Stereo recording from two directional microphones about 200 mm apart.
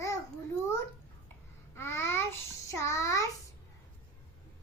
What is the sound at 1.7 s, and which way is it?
Babbling, 15° left (ahead or behind).